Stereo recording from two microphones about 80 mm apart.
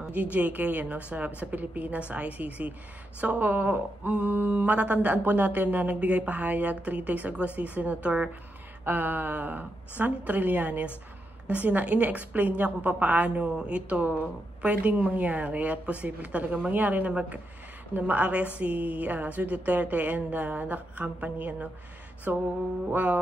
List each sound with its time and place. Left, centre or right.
0.0 s a woman's voice: centre